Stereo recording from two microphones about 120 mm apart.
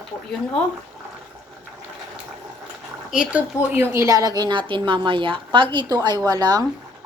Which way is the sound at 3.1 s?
10° right (ahead or behind).